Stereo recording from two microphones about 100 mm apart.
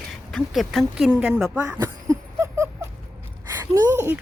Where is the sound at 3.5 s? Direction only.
25° right (ahead or behind).